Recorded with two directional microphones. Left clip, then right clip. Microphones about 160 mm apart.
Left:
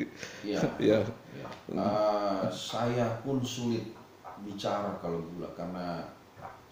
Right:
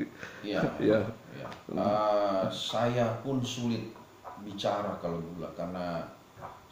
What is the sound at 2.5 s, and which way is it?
Speech, 10° right (ahead or behind).